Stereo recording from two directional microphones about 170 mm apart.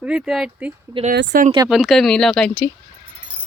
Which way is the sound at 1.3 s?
60° right (ahead or behind).